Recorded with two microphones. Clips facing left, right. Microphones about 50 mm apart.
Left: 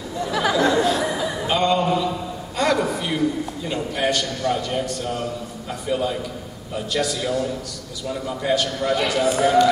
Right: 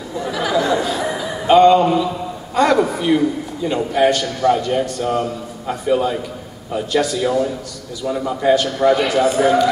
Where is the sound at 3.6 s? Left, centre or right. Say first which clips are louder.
Right 9 dB; centre.